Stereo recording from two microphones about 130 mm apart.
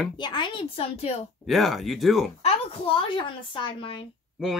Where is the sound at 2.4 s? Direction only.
50° left (ahead or behind).